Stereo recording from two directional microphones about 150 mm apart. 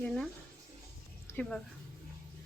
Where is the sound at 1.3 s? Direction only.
5° left (ahead or behind).